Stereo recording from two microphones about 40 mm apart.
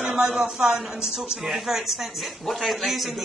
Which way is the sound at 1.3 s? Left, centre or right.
Centre.